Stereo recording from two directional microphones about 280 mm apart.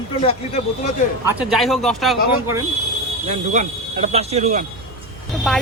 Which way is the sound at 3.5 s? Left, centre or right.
Right.